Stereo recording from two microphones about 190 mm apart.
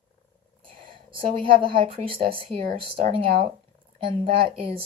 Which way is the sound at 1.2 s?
30° right (ahead or behind).